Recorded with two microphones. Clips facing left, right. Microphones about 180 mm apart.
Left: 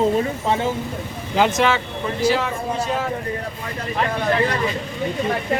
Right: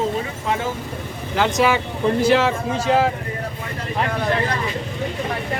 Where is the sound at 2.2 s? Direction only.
70° right (ahead or behind).